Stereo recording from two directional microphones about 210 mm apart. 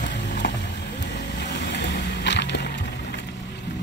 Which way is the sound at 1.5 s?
55° left (ahead or behind).